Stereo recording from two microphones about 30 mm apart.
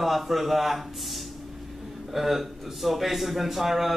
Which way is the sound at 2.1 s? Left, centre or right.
Centre.